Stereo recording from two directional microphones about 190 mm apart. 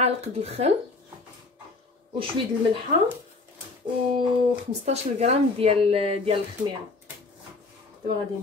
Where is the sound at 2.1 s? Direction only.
30° right (ahead or behind).